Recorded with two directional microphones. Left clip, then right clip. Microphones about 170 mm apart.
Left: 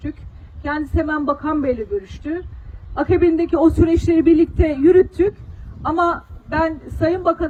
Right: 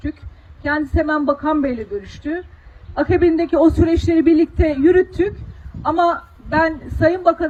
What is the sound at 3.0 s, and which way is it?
A man's voice, 30° right (ahead or behind).